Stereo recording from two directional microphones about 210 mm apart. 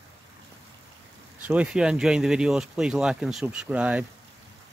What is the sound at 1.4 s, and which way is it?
Speech, 5° right (ahead or behind).